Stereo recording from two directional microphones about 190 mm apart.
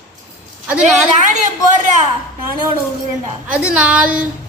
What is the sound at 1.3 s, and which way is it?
Speech, 40° right (ahead or behind).